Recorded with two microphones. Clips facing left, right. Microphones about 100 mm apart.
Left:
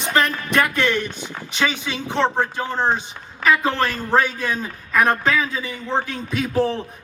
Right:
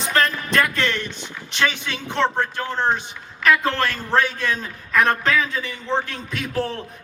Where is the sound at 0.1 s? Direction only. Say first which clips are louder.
Left 1 dB; 15° left (ahead or behind).